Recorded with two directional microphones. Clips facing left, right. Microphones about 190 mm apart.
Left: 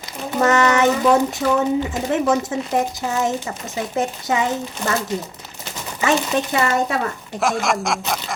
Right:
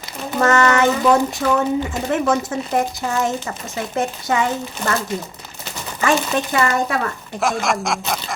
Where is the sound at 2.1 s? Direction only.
20° left (ahead or behind).